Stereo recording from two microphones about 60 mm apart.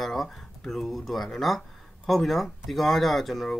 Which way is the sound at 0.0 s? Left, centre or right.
Centre.